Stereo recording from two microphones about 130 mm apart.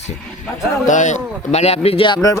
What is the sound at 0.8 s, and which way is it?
Speech, 70° left (ahead or behind).